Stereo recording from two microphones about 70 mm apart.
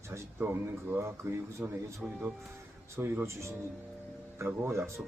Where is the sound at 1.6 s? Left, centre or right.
Right.